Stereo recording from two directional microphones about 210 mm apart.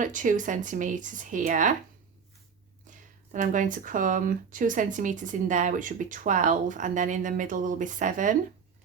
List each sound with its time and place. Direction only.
0.0 s speech: 35° right (ahead or behind)
3.3 s speech: 40° right (ahead or behind)